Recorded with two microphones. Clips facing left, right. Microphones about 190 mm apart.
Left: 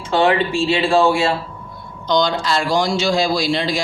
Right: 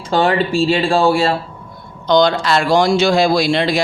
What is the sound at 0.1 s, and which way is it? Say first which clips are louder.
Speech: right 1 dB; 35° right (ahead or behind).